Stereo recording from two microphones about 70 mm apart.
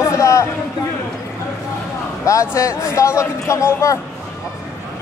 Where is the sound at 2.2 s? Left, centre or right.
Left.